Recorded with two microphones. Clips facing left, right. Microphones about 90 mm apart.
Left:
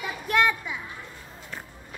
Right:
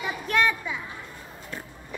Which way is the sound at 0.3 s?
5° left (ahead or behind).